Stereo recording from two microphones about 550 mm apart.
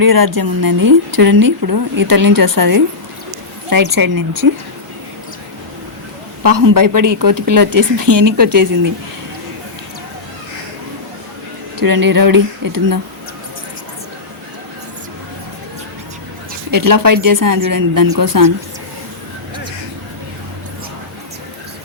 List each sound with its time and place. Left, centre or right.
0.0 s speech: right
3.9 s speech: right
6.4 s speech: right
8.1 s speech: right
11.8 s speech: right
16.7 s speech: right